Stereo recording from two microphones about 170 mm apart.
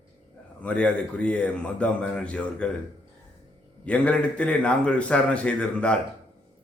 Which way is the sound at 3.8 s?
10° left (ahead or behind).